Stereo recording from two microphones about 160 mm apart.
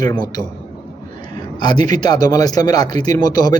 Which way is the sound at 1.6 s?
25° left (ahead or behind).